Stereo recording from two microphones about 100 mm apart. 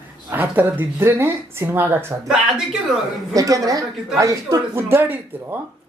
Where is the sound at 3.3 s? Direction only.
35° right (ahead or behind); by 5.1 s 20° right (ahead or behind).